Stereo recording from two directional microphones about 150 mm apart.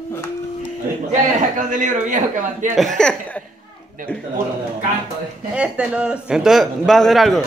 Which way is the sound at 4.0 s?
65° right (ahead or behind).